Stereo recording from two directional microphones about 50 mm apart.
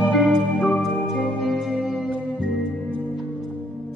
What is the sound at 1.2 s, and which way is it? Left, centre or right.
Music, centre.